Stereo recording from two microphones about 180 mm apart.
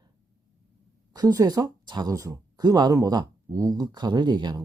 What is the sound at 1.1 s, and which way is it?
Speech, 20° right (ahead or behind).